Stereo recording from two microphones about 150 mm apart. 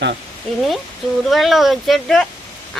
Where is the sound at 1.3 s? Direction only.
Centre (ahead or behind).